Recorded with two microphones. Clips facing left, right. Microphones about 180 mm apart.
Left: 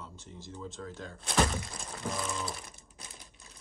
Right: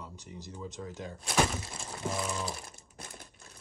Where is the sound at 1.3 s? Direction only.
Centre (ahead or behind).